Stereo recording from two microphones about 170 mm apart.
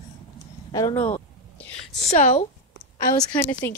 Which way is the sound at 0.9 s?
40° left (ahead or behind).